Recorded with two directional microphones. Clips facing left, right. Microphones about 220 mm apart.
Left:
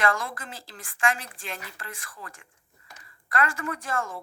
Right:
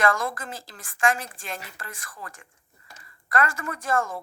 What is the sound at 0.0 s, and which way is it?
A woman's voice, 45° right (ahead or behind).